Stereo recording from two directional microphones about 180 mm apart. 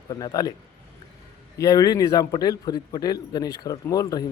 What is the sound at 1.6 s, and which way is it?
Speech, 20° left (ahead or behind).